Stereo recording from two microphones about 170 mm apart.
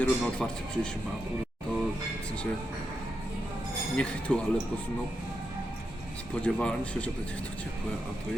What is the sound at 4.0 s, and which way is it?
Speech, 5° left (ahead or behind).